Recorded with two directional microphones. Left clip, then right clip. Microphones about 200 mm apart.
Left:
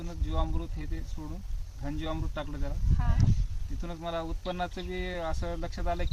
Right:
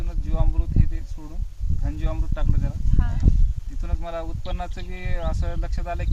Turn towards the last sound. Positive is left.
turn(degrees=-10)  # may be behind; listen again after turning